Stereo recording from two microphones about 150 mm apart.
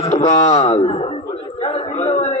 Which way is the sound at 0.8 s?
35° left (ahead or behind).